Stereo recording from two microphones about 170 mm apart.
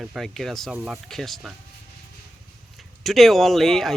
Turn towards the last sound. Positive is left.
turn(degrees=0)  # may be behind; listen again after turning